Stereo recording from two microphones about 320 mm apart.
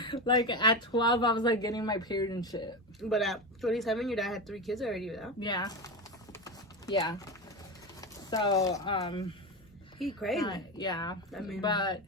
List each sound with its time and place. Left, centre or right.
0.0 s speech: centre
3.0 s speech: centre
5.4 s speech: centre
6.9 s speech: centre
10.0 s speech: centre
10.4 s speech: centre
11.3 s speech: centre
11.6 s speech: centre